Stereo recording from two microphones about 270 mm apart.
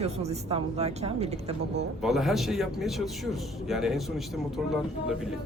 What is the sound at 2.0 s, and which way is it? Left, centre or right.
Speech, centre.